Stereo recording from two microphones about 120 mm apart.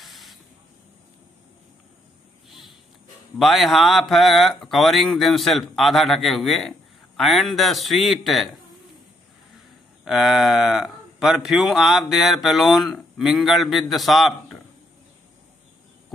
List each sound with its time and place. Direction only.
0.0 s spray: centre (ahead or behind)
3.3 s speech: centre (ahead or behind)
10.0 s speech: 5° right (ahead or behind)